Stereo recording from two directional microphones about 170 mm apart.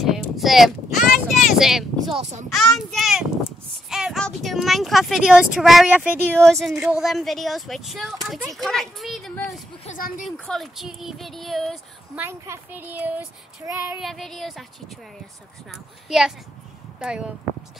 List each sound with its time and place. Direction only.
0.1 s a sound: centre (ahead or behind)
0.9 s vehicle: 50° left (ahead or behind)
1.5 s a sound: centre (ahead or behind)
2.5 s speech: centre (ahead or behind)
9.8 s speech: 50° left (ahead or behind)
10.2 s speech: centre (ahead or behind)
12.2 s speech: 15° right (ahead or behind)
13.9 s speech: centre (ahead or behind)
15.7 s speech: centre (ahead or behind)